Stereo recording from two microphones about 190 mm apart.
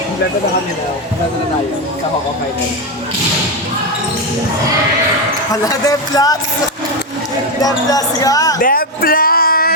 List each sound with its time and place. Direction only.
5.5 s speech: 20° left (ahead or behind)
7.6 s speech: 20° left (ahead or behind)
8.6 s a sound: 50° left (ahead or behind)